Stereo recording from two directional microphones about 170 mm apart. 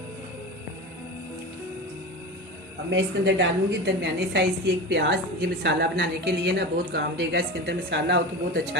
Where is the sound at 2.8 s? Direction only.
90° right.